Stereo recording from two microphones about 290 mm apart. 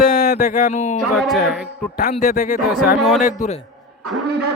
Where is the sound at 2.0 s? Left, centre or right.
Left.